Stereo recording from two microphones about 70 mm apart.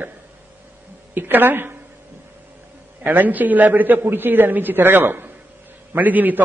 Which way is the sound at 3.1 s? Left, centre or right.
Right.